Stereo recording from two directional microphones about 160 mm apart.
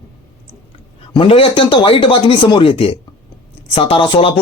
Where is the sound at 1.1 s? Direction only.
35° left (ahead or behind).